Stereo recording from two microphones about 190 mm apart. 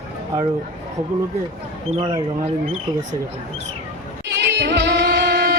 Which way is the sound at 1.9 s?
30° right (ahead or behind).